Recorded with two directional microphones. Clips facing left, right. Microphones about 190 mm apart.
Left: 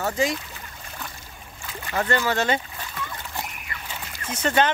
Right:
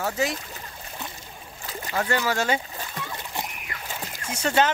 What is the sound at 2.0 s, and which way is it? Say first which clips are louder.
Speech: left 2 dB; 5° right (ahead or behind).